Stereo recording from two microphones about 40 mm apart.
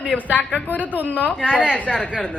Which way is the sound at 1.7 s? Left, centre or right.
Left.